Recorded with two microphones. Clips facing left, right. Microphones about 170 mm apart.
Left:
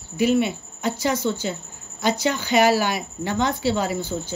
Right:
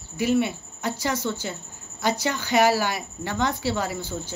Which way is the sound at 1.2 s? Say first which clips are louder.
Left 4 dB; 25° left (ahead or behind).